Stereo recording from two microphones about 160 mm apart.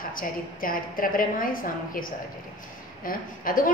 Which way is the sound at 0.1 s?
60° left (ahead or behind).